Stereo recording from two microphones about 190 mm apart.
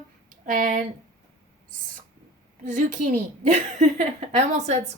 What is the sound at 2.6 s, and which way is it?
A woman's voice, 40° right (ahead or behind).